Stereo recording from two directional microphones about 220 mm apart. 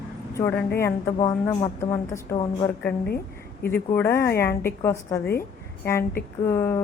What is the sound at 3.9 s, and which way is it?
Speech, 10° left (ahead or behind).